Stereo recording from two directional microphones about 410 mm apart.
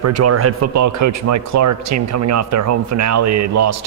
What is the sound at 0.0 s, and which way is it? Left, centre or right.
Speech, right.